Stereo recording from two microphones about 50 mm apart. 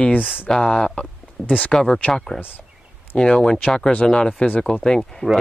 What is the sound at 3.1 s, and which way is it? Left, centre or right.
Speech, left.